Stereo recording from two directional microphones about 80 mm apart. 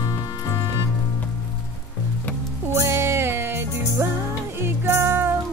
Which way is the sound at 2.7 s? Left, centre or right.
Right.